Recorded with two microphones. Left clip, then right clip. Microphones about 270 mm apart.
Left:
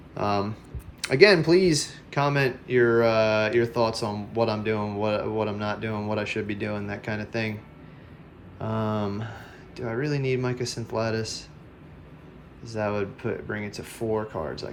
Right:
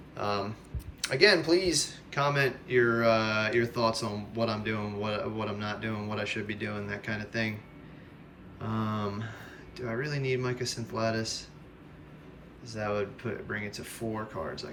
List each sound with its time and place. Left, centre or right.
0.2 s speech: centre
8.6 s speech: centre
12.6 s speech: centre